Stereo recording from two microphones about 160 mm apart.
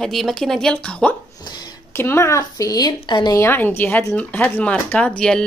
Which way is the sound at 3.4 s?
10° left (ahead or behind).